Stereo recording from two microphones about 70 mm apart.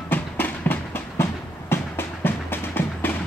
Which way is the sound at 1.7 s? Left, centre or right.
Left.